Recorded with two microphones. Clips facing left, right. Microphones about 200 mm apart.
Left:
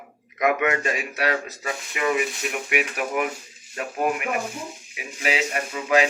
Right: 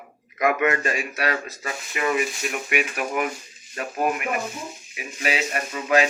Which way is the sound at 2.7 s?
15° left (ahead or behind).